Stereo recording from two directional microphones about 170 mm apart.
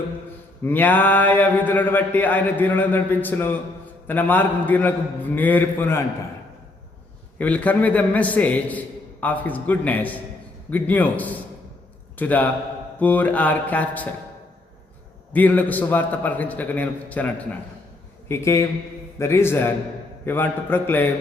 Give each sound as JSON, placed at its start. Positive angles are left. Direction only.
{"t": 0.6, "sound": "mantra", "side_deg": 10}
{"t": 7.3, "sound": "mantra", "side_deg": 10}
{"t": 12.1, "sound": "a man's voice", "side_deg": 10}
{"t": 13.0, "sound": "mantra", "side_deg": 10}
{"t": 15.3, "sound": "mantra", "side_deg": 10}